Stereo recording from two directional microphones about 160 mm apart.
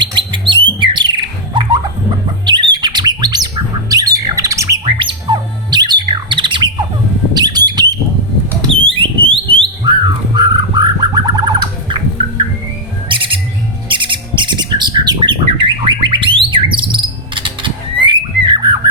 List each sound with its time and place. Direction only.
0.0 s bird: 30° right (ahead or behind)
1.5 s a sound: 30° right (ahead or behind)
2.5 s bird: 30° right (ahead or behind)
4.9 s squawk: 30° right (ahead or behind)
7.3 s bird: 25° right (ahead or behind)
8.9 s alarm: 35° right (ahead or behind)
13.1 s music: 35° right (ahead or behind)
13.8 s bird: 30° right (ahead or behind)